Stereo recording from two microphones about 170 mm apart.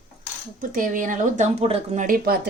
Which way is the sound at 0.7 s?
50° right (ahead or behind).